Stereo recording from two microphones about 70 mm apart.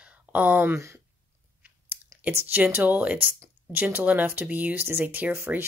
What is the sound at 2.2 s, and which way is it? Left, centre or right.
Speech, right.